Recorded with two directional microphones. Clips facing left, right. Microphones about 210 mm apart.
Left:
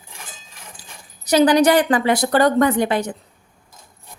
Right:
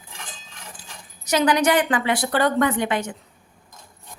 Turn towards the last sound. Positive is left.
turn(degrees=35)  # may be behind; listen again after turning